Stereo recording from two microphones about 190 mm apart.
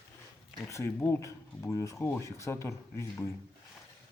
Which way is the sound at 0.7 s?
15° left (ahead or behind).